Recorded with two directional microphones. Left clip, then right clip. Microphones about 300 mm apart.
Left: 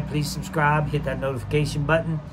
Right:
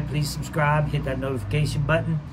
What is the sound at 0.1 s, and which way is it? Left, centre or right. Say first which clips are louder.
A man's voice: left 3 dB; centre.